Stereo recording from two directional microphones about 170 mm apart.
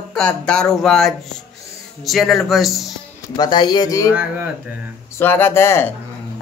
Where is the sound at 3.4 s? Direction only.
25° left (ahead or behind).